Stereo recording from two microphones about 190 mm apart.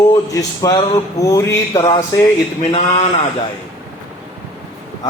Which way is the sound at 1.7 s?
20° left (ahead or behind).